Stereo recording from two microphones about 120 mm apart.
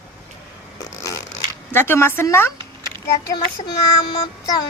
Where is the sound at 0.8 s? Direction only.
30° left (ahead or behind).